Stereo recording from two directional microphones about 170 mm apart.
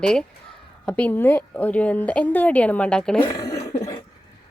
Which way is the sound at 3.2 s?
20° left (ahead or behind).